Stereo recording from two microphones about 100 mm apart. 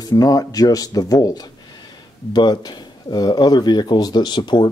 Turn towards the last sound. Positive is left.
turn(degrees=50)  # may be behind; listen again after turning